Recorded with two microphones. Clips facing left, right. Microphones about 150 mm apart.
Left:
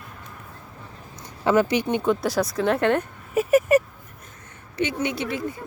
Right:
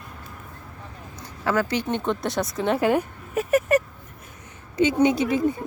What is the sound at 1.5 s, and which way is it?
Speech, 15° left (ahead or behind).